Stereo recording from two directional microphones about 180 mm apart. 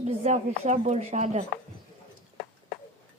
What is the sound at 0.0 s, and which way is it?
Speech, 40° right (ahead or behind).